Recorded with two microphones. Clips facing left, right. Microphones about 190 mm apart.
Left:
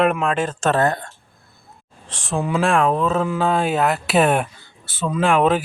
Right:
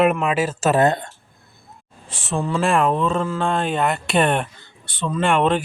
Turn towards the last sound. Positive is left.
turn(degrees=5)  # may be behind; listen again after turning